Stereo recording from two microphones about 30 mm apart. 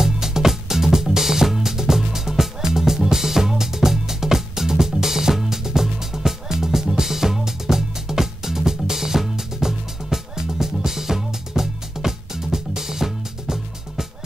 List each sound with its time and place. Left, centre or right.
0.0 s music: centre